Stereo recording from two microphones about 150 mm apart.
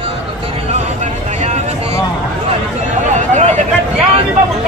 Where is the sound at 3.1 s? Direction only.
55° right (ahead or behind).